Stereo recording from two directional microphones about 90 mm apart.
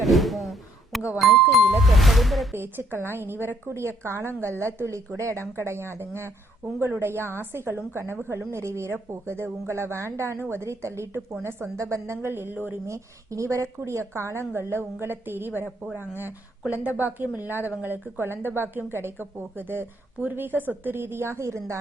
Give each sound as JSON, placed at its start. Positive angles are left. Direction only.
{"t": 0.0, "sound": "a sound", "side_deg": 0}
{"t": 1.2, "sound": "music", "side_deg": 0}
{"t": 1.8, "sound": "ding", "side_deg": 0}
{"t": 2.5, "sound": "speech", "side_deg": -25}